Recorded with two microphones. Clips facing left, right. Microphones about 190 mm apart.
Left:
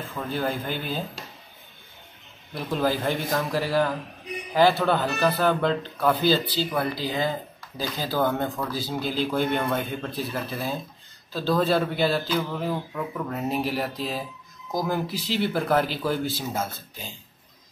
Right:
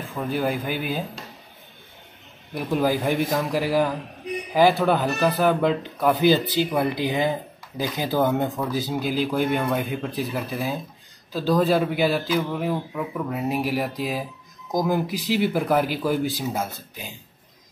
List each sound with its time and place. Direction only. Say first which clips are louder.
0.1 s speech: right 4 dB; 15° right (ahead or behind)
2.5 s speech: right 3 dB; 10° right (ahead or behind)